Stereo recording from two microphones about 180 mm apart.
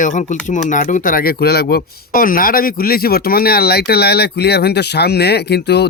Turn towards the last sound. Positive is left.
turn(degrees=65)  # may be behind; listen again after turning